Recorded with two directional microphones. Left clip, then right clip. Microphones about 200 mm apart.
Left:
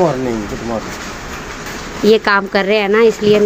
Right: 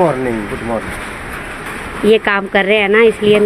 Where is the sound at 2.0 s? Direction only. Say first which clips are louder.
Left 1 dB; 10° left (ahead or behind).